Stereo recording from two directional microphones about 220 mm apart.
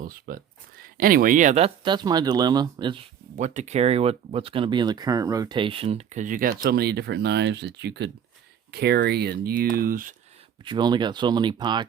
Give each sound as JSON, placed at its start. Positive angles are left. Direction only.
{"t": 0.0, "sound": "speech", "side_deg": -40}
{"t": 3.3, "sound": "speech", "side_deg": -35}
{"t": 10.7, "sound": "speech", "side_deg": -20}